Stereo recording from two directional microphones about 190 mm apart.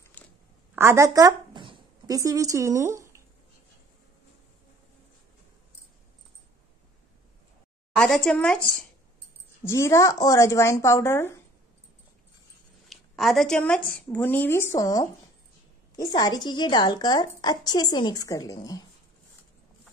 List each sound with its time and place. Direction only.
0.2 s a sound: 10° left (ahead or behind)
0.7 s speech: 15° right (ahead or behind)
7.9 s a woman's voice: centre (ahead or behind)
12.9 s a woman's voice: centre (ahead or behind); by 18.8 s 20° left (ahead or behind)